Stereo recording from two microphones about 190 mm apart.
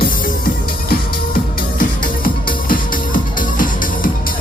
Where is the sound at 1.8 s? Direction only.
45° left (ahead or behind).